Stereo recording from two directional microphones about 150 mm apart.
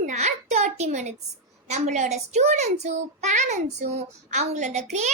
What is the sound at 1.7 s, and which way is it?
A child's voice, 50° right (ahead or behind).